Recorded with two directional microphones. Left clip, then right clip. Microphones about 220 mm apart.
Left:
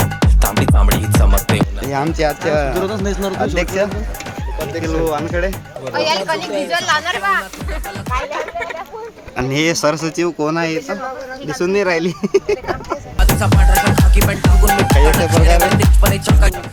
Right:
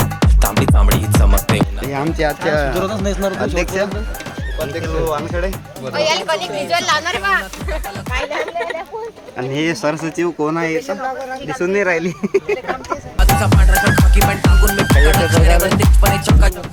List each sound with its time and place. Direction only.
0.0 s music: centre (ahead or behind)
2.8 s speech: 25° right (ahead or behind)
3.4 s speech: 10° left (ahead or behind)
4.7 s speech: 25° left (ahead or behind)
5.9 s speech: 50° right (ahead or behind)
9.4 s speech: 30° left (ahead or behind)
13.1 s music: centre (ahead or behind)